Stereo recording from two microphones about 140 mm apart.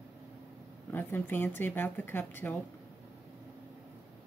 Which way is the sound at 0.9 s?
15° left (ahead or behind).